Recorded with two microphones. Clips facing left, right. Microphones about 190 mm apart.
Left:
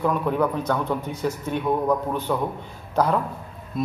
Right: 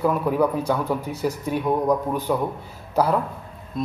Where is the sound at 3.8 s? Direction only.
5° left (ahead or behind).